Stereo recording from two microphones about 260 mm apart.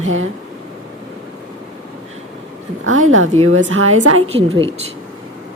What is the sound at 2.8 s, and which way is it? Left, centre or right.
Speech, right.